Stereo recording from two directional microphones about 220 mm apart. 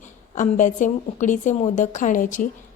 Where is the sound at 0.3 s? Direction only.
35° left (ahead or behind).